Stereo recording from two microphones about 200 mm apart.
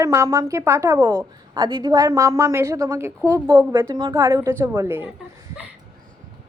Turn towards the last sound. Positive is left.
turn(degrees=-10)  # may be behind; listen again after turning